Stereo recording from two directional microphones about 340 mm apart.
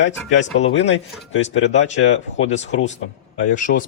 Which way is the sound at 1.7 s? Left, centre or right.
Left.